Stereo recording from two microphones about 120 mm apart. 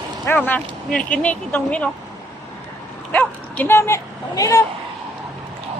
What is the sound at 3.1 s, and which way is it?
Speech, 15° left (ahead or behind).